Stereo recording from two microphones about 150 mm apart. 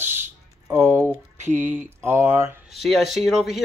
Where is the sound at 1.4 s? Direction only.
55° right (ahead or behind).